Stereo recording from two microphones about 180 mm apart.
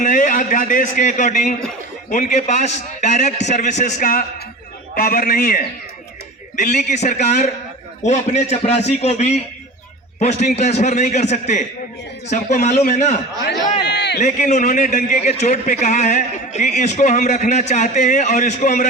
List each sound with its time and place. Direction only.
0.0 s a man's voice: 45° left (ahead or behind)
13.8 s speech: 70° left (ahead or behind)
14.2 s a man's voice: 40° left (ahead or behind)